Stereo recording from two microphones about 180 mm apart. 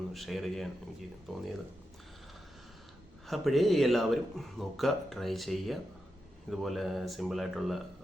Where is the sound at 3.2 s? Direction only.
Centre (ahead or behind).